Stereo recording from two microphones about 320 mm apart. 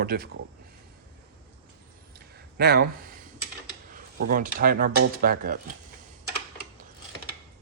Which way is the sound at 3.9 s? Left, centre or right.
Right.